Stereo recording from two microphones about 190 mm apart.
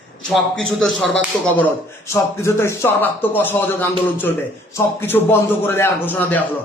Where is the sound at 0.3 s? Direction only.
5° left (ahead or behind).